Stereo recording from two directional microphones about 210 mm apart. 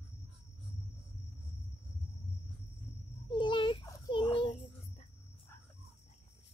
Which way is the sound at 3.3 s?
25° left (ahead or behind).